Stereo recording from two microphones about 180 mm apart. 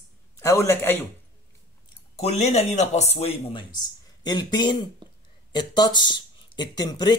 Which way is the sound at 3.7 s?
25° left (ahead or behind).